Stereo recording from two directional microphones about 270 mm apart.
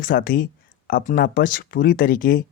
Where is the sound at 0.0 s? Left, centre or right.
Left.